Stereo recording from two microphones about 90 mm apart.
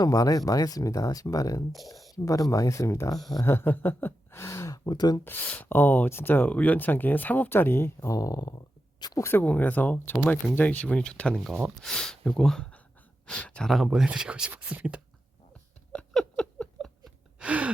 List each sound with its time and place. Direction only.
0.0 s speech: 45° left (ahead or behind)
5.2 s speech: 20° left (ahead or behind)
8.1 s speech: 40° left (ahead or behind)
9.1 s speech: 30° left (ahead or behind)
9.4 s speech: 20° left (ahead or behind); by 15.0 s 15° right (ahead or behind)
15.9 s a sound: 10° left (ahead or behind)
17.4 s gasp: 15° right (ahead or behind)